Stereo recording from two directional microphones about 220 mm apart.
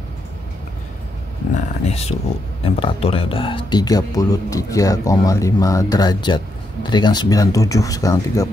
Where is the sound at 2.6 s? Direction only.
25° left (ahead or behind).